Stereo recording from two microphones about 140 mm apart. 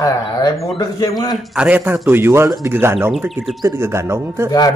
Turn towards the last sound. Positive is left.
turn(degrees=-20)  # may be behind; listen again after turning